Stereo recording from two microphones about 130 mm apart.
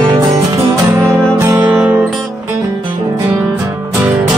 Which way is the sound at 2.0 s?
Centre (ahead or behind).